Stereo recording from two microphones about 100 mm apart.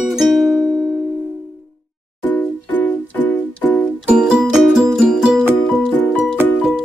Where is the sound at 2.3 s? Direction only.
15° left (ahead or behind).